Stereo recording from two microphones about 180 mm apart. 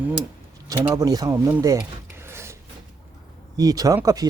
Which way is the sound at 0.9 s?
20° right (ahead or behind).